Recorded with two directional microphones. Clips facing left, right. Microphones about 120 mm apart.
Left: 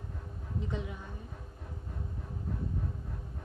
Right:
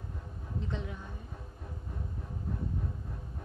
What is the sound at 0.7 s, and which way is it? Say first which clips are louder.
Speech: left 1 dB; 10° left (ahead or behind).